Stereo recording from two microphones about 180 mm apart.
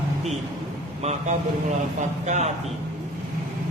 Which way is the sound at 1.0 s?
40° right (ahead or behind).